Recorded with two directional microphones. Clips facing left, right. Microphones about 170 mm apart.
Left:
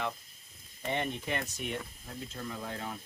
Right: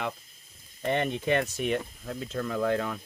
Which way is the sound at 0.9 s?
75° right (ahead or behind).